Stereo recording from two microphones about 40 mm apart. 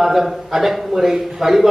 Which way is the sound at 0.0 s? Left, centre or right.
Centre.